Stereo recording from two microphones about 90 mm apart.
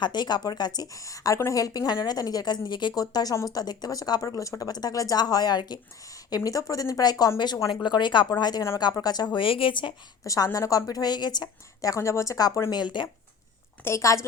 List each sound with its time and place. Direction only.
0.0 s a woman's voice: 55° left (ahead or behind)
6.3 s a woman's voice: 40° left (ahead or behind); by 8.3 s 60° left (ahead or behind)
8.3 s a woman's voice: 50° left (ahead or behind)
9.3 s a woman's voice: 75° left (ahead or behind)
10.2 s a woman's voice: 40° left (ahead or behind)
12.7 s speech: 55° left (ahead or behind)
13.8 s a woman's voice: 35° left (ahead or behind)